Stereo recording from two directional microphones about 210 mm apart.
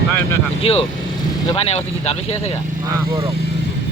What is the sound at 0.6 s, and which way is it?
Speech, 25° left (ahead or behind).